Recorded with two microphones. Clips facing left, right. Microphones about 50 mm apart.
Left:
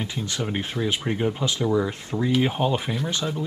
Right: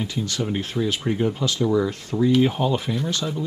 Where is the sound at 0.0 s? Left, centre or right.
Centre.